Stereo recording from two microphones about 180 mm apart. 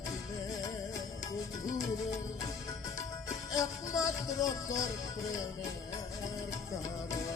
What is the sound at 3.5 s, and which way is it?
Music, 20° left (ahead or behind).